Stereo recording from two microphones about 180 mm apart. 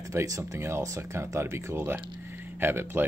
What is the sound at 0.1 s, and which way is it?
Speech, 15° right (ahead or behind).